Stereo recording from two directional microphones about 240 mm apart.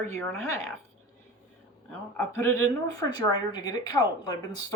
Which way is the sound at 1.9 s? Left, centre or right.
Centre.